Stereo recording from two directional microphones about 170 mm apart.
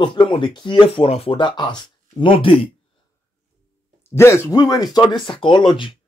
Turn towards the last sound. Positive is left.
turn(degrees=30)  # may be behind; listen again after turning